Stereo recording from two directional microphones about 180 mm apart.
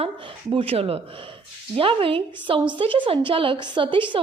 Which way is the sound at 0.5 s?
30° right (ahead or behind).